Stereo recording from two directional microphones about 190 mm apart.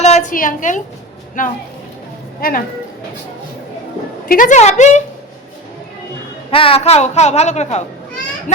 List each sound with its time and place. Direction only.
0.0 s a woman's voice: 35° left (ahead or behind)
4.3 s a woman's voice: 45° left (ahead or behind)
6.5 s a woman's voice: 30° left (ahead or behind)